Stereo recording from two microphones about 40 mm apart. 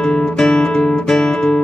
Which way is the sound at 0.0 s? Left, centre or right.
Left.